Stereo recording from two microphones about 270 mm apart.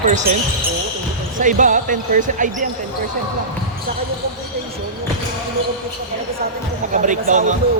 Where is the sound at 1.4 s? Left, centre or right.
Right.